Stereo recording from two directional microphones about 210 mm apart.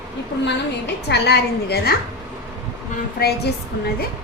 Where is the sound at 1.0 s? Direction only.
55° left (ahead or behind).